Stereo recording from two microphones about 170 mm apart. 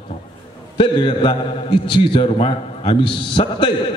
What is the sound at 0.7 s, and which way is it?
A man's voice, 30° left (ahead or behind).